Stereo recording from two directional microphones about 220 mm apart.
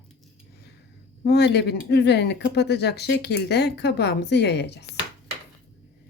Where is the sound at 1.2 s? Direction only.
50° left (ahead or behind).